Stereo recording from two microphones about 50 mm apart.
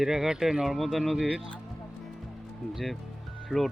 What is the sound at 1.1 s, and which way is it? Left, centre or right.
Speech, right.